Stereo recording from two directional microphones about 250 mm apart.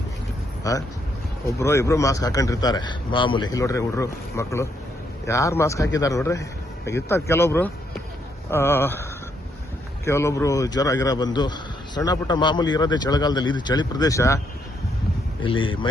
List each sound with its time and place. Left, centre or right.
1.5 s a man's voice: centre
10.1 s a man's voice: centre